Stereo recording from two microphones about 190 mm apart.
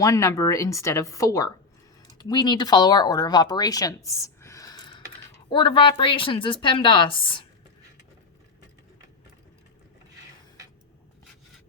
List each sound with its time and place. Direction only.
0.0 s a woman's voice: 15° left (ahead or behind)